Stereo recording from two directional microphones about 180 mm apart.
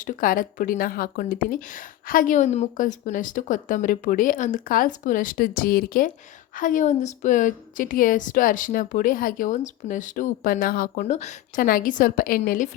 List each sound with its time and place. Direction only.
0.0 s a woman's voice: 50° left (ahead or behind)